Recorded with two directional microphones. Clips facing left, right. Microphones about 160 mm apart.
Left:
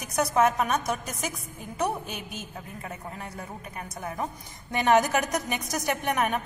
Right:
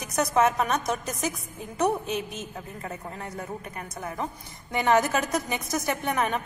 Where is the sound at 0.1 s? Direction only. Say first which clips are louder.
Even; 10° left (ahead or behind).